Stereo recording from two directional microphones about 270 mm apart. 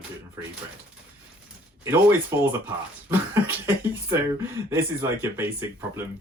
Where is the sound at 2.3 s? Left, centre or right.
Centre.